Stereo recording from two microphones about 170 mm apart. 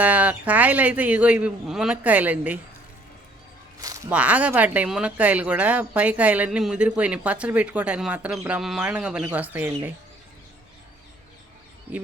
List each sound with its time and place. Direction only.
0.0 s speech: 10° right (ahead or behind)
3.8 s a sound: 20° right (ahead or behind)
4.1 s speech: 10° right (ahead or behind)
11.9 s speech: 10° right (ahead or behind)